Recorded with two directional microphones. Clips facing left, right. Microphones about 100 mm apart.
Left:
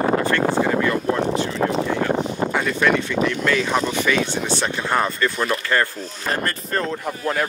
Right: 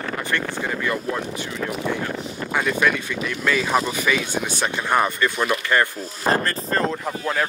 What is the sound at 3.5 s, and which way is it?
Speech, 5° right (ahead or behind).